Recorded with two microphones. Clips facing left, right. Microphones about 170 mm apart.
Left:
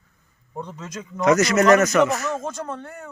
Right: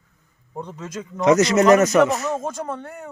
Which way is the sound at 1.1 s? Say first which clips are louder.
Right 2 dB; 25° right (ahead or behind).